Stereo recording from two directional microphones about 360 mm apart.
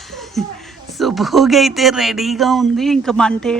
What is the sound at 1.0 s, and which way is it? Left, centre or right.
Speech, centre.